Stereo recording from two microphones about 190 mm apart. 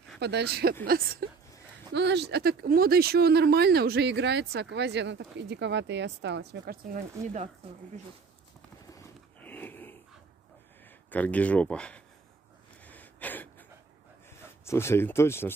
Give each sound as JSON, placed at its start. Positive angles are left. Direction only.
{"t": 0.2, "sound": "speech", "side_deg": -60}
{"t": 0.8, "sound": "a sound", "side_deg": -50}
{"t": 2.0, "sound": "speech", "side_deg": -65}
{"t": 8.9, "sound": "a sound", "side_deg": 10}
{"t": 11.1, "sound": "speech", "side_deg": 10}
{"t": 12.8, "sound": "gasp", "side_deg": 10}
{"t": 14.6, "sound": "speech", "side_deg": 15}